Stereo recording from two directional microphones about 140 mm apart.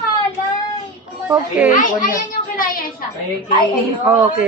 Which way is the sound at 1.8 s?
75° left (ahead or behind).